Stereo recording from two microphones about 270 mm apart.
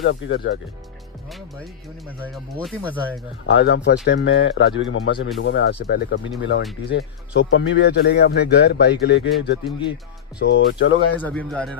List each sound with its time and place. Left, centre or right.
0.0 s a man's voice: left
2.3 s speech: centre
3.4 s a man's voice: left
11.1 s speech: centre